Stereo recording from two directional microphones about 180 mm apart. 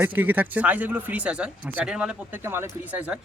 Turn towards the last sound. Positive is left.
turn(degrees=-5)  # may be behind; listen again after turning